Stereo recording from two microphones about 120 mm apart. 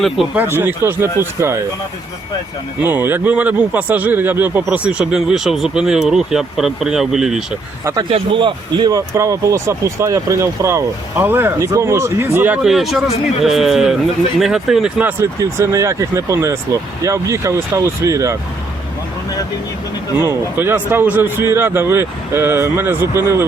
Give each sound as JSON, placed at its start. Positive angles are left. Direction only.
{"t": 0.2, "sound": "speech", "side_deg": 0}
{"t": 0.5, "sound": "speech", "side_deg": -20}
{"t": 2.8, "sound": "speech", "side_deg": -15}
{"t": 8.1, "sound": "speech", "side_deg": -45}
{"t": 9.0, "sound": "speech", "side_deg": -25}
{"t": 12.6, "sound": "speech", "side_deg": 0}
{"t": 15.2, "sound": "speech", "side_deg": -25}
{"t": 20.1, "sound": "speech", "side_deg": -20}